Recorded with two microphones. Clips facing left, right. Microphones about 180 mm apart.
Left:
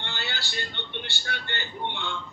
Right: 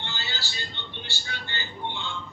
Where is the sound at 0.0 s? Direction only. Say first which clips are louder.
Left 1 dB; 60° left (ahead or behind).